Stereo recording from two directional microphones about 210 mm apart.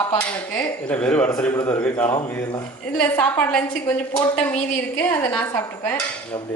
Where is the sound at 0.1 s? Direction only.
10° left (ahead or behind).